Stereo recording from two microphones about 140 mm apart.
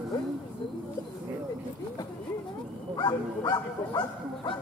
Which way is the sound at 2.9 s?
30° left (ahead or behind).